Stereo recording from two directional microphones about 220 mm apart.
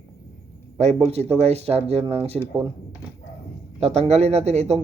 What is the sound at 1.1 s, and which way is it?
Speech, 30° right (ahead or behind).